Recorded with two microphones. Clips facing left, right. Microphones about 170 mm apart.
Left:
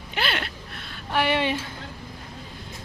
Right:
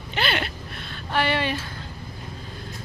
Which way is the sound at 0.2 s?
Centre (ahead or behind).